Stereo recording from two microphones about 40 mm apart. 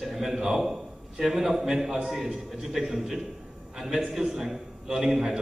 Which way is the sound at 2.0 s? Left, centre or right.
Centre.